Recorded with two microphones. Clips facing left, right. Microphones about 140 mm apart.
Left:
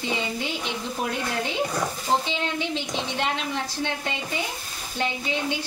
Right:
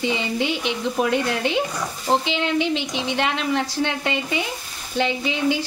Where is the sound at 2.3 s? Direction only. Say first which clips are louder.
Right 6 dB; 90° right.